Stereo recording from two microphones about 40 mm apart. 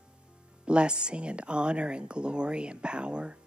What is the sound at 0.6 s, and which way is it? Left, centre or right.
Speech, right.